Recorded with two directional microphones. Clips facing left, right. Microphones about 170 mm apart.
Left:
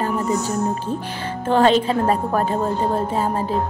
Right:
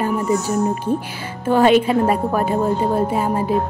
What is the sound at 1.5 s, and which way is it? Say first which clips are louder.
Speech: right 2 dB; 10° right (ahead or behind).